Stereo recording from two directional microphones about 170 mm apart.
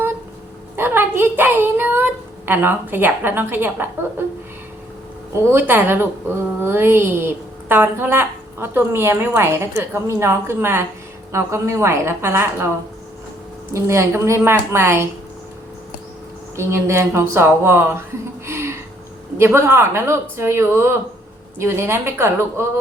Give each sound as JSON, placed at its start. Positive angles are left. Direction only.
{"t": 0.8, "sound": "a woman's voice", "side_deg": -15}
{"t": 5.5, "sound": "a woman's voice", "side_deg": -10}
{"t": 13.7, "sound": "a woman's voice", "side_deg": -15}
{"t": 16.6, "sound": "a woman's voice", "side_deg": -15}
{"t": 18.4, "sound": "a sound", "side_deg": -15}
{"t": 19.4, "sound": "a woman's voice", "side_deg": -10}